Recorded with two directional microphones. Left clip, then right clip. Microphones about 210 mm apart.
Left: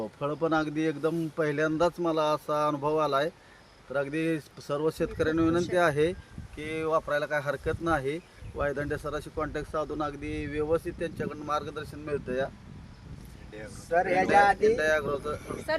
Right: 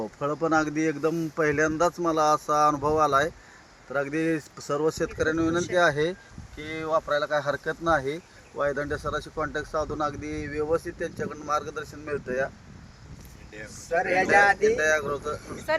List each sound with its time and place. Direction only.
0.0 s speech: 20° right (ahead or behind)
13.8 s speech: 45° right (ahead or behind)
14.8 s speech: 15° right (ahead or behind)
15.7 s speech: 35° right (ahead or behind)